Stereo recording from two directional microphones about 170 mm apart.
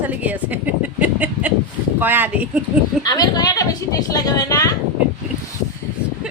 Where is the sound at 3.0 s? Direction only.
25° left (ahead or behind).